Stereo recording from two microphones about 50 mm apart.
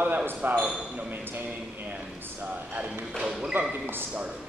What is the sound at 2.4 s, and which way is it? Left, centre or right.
Speech, right.